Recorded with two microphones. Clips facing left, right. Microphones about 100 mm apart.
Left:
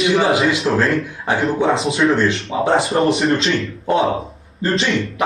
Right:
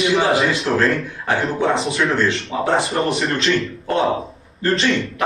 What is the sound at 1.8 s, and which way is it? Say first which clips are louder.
Speech: left 3 dB; 30° left (ahead or behind).